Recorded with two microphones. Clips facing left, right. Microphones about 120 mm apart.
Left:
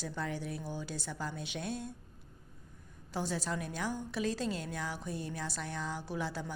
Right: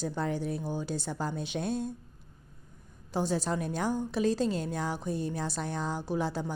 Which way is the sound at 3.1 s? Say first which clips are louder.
Right 6 dB; 20° right (ahead or behind).